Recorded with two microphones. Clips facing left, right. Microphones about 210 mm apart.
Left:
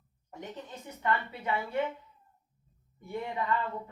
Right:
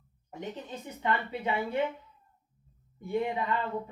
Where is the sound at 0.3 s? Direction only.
20° right (ahead or behind).